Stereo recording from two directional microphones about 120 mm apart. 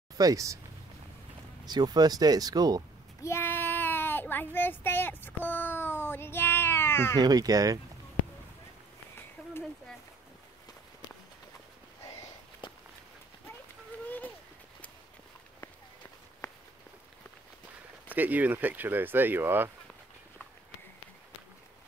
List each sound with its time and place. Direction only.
0.2 s speech: 30° right (ahead or behind)
1.7 s speech: 35° right (ahead or behind)
3.2 s child singing: 20° left (ahead or behind)
7.2 s speech: 35° right (ahead or behind)
12.6 s walk: 45° left (ahead or behind)
14.0 s a sound: 15° left (ahead or behind)
16.4 s walk: 30° left (ahead or behind)
18.1 s speech: 15° right (ahead or behind)